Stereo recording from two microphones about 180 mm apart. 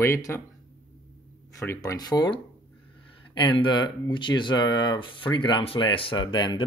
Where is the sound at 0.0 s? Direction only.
15° left (ahead or behind).